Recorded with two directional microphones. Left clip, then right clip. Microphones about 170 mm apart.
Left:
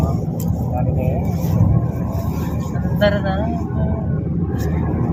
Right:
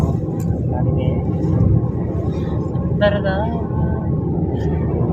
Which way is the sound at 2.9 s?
25° right (ahead or behind).